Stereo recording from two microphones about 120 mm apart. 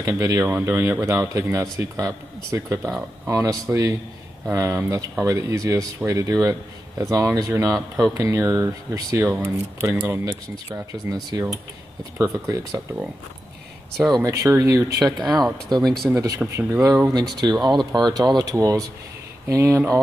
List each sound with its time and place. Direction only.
0.0 s speech: 25° right (ahead or behind)
12.2 s speech: 25° right (ahead or behind)
13.9 s speech: centre (ahead or behind)
14.2 s speech: 25° right (ahead or behind)
15.0 s speech: centre (ahead or behind)
16.4 s speech: 5° right (ahead or behind)
17.1 s speech: 35° right (ahead or behind)